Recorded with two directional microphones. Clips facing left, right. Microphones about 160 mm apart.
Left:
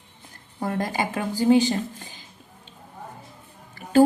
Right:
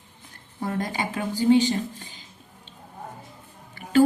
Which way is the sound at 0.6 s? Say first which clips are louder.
Left 2 dB; 50° left (ahead or behind).